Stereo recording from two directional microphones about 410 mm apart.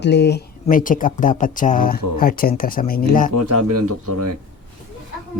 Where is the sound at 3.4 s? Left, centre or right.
Right.